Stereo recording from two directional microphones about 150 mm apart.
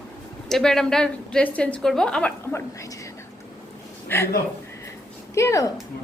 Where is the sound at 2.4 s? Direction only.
20° left (ahead or behind).